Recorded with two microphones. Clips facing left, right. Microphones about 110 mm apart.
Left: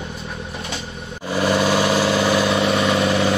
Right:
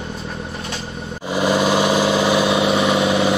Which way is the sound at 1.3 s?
15° right (ahead or behind).